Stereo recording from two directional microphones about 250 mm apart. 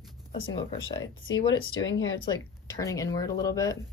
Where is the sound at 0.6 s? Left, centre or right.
Centre.